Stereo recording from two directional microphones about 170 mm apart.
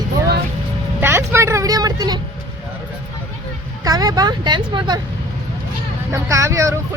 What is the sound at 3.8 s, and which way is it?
Speech, 20° right (ahead or behind).